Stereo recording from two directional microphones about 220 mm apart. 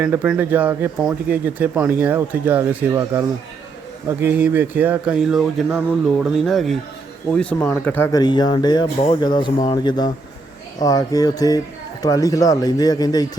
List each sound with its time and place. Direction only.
0.0 s a man's voice: 10° right (ahead or behind); by 13.2 s 15° left (ahead or behind)